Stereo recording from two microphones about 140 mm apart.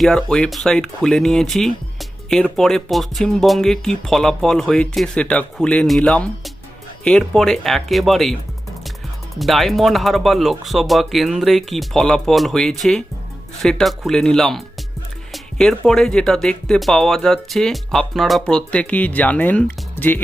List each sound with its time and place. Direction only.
0.0 s speech: 5° left (ahead or behind)
15.3 s music: 5° left (ahead or behind)
15.9 s speech: 5° left (ahead or behind)